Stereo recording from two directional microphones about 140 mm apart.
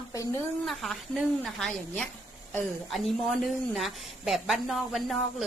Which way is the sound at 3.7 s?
Centre (ahead or behind).